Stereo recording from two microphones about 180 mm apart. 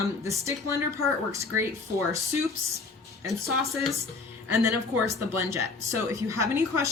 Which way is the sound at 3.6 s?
15° right (ahead or behind).